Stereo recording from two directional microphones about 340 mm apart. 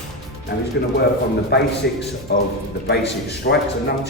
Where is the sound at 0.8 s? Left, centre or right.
Left.